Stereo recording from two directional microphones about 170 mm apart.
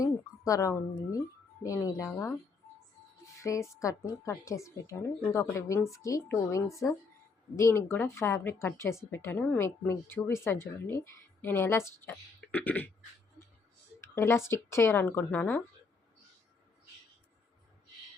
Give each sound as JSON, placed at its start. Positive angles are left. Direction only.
{"t": 0.0, "sound": "a woman's voice", "side_deg": 20}
{"t": 3.3, "sound": "a woman's voice", "side_deg": 15}
{"t": 14.0, "sound": "a woman's voice", "side_deg": 15}